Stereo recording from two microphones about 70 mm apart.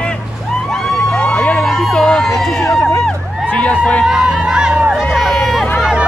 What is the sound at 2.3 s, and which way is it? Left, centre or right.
Run, centre.